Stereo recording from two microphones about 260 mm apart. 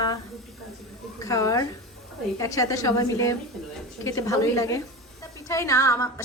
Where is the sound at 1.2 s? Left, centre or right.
Centre.